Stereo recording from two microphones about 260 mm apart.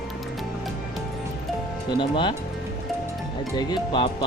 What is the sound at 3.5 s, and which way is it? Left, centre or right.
Music, centre.